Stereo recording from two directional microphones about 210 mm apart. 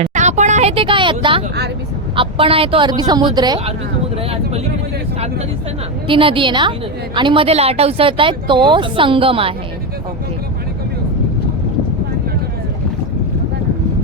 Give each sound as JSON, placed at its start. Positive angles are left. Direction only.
{"t": 0.0, "sound": "a woman's voice", "side_deg": -35}
{"t": 6.1, "sound": "a woman's voice", "side_deg": -25}